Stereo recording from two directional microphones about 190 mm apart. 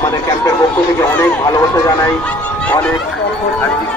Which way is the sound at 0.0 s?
15° left (ahead or behind).